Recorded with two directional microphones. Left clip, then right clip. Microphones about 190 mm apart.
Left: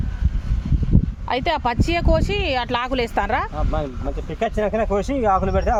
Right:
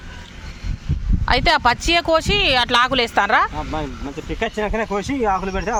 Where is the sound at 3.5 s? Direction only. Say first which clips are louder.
Even; 55° left (ahead or behind).